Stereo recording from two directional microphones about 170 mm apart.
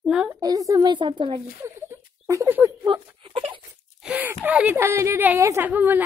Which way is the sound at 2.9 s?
30° right (ahead or behind).